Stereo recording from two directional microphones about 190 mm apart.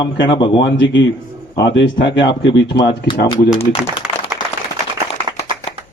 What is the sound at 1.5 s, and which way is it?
A man's voice, 65° left (ahead or behind).